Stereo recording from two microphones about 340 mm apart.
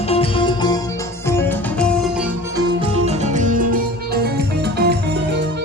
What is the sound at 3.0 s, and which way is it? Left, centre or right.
Music, right.